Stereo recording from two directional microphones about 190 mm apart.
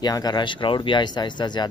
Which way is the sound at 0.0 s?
20° left (ahead or behind).